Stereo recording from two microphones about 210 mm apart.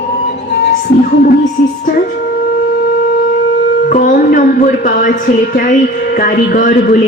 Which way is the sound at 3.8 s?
40° left (ahead or behind).